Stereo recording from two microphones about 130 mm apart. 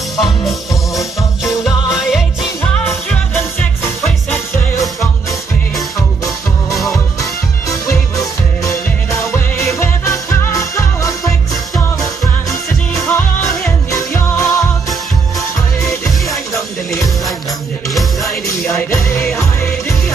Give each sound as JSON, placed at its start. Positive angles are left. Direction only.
{"t": 0.2, "sound": "music", "side_deg": 0}
{"t": 2.7, "sound": "music", "side_deg": 15}
{"t": 6.7, "sound": "music", "side_deg": 0}
{"t": 7.2, "sound": "music", "side_deg": 25}
{"t": 12.4, "sound": "music", "side_deg": 25}
{"t": 18.7, "sound": "music", "side_deg": 20}